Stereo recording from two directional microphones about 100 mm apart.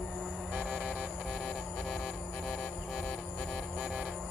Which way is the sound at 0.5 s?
10° right (ahead or behind).